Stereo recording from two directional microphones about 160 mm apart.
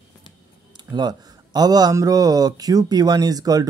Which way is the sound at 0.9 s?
25° right (ahead or behind).